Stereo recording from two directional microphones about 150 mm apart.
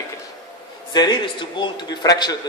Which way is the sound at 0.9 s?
30° left (ahead or behind).